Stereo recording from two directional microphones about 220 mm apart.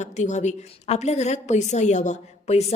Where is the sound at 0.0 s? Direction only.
30° left (ahead or behind).